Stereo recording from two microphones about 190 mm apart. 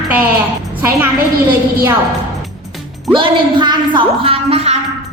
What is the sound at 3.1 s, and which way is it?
A woman's voice, 25° right (ahead or behind).